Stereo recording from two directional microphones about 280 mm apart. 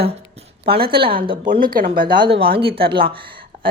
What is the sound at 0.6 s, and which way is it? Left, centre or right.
Speech, right.